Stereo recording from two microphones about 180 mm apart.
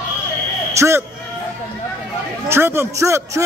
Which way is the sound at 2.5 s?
15° right (ahead or behind).